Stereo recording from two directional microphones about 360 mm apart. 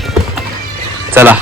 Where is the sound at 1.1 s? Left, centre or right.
Centre.